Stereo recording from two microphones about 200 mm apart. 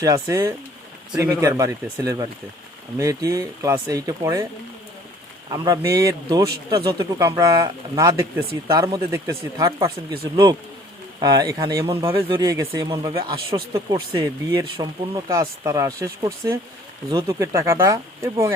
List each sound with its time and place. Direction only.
0.0 s speech: 15° right (ahead or behind)
5.5 s speech: 20° right (ahead or behind)